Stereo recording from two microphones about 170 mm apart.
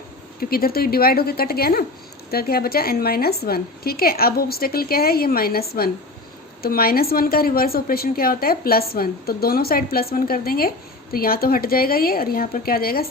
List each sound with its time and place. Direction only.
0.3 s a woman's voice: 60° left (ahead or behind)